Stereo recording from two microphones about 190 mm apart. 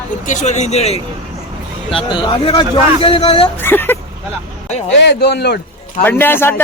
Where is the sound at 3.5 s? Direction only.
10° left (ahead or behind).